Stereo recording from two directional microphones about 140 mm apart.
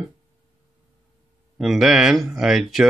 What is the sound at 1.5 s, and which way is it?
Speech, centre (ahead or behind).